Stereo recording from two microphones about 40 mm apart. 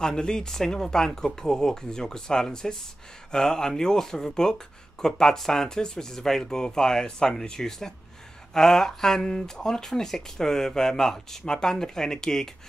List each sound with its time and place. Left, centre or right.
0.0 s speech: centre